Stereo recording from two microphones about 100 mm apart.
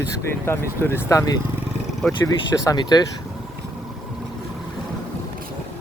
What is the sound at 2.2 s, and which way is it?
Speech, 35° left (ahead or behind).